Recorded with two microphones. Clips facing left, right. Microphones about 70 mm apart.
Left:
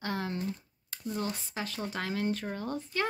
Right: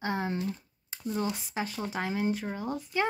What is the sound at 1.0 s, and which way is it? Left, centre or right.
Speech, centre.